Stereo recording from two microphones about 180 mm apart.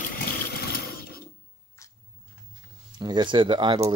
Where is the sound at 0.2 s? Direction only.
60° left (ahead or behind).